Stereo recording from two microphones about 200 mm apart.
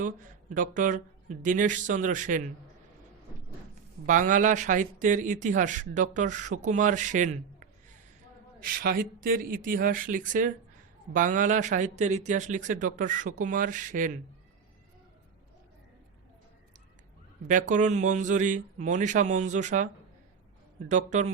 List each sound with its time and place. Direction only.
0.5 s speech: 40° right (ahead or behind)
4.0 s speech: 40° right (ahead or behind)
17.5 s speech: 40° right (ahead or behind)